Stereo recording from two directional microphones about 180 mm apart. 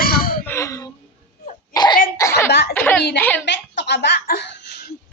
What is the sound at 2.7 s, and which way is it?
Speech, 10° left (ahead or behind).